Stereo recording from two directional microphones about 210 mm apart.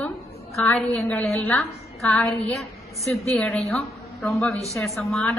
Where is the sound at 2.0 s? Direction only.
Centre (ahead or behind).